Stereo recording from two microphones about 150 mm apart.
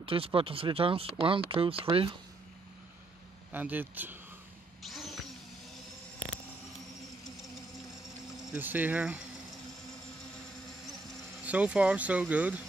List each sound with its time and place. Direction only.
0.0 s speech: 40° right (ahead or behind)
3.5 s speech: 10° right (ahead or behind)
4.8 s vehicle: centre (ahead or behind)
8.5 s speech: 10° right (ahead or behind)
11.4 s speech: 10° right (ahead or behind)